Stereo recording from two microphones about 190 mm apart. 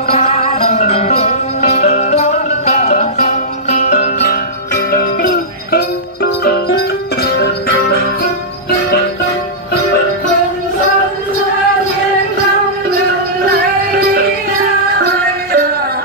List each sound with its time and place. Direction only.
0.1 s music: 35° left (ahead or behind)
4.9 s music: 55° left (ahead or behind)
15.0 s music: 55° right (ahead or behind)